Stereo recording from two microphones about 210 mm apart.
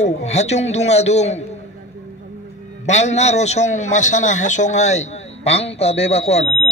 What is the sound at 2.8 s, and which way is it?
A man's voice, 35° left (ahead or behind).